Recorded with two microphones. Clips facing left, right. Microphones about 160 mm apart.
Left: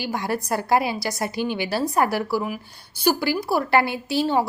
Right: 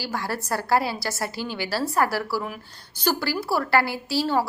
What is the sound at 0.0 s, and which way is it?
A woman's voice, 20° left (ahead or behind).